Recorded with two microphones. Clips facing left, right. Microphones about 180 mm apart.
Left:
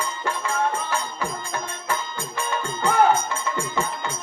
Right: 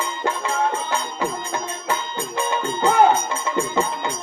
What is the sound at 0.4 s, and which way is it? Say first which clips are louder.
Music: even; 20° right (ahead or behind).